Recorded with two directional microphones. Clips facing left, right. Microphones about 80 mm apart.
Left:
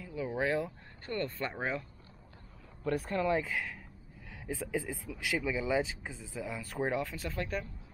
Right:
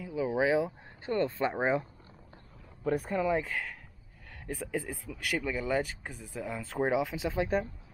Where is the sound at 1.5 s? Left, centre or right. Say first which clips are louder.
Right 7 dB; right.